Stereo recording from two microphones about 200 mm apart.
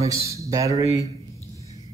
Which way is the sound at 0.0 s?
15° right (ahead or behind).